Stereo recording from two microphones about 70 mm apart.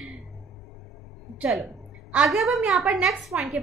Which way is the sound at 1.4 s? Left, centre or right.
Centre.